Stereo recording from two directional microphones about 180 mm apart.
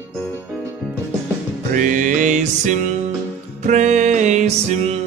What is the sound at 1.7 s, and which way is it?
Music, 45° right (ahead or behind).